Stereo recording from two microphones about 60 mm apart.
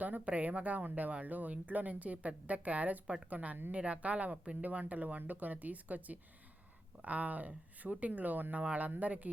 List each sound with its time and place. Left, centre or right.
0.0 s speech: right